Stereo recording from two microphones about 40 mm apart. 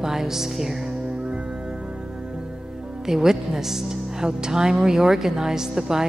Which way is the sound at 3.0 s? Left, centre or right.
Centre.